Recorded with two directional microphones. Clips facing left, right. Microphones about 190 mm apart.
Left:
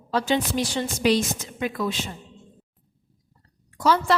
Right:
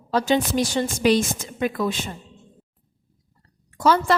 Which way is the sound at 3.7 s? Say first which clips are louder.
Right 2 dB; 50° right (ahead or behind).